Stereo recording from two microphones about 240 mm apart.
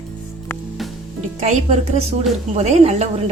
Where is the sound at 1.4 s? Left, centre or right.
Right.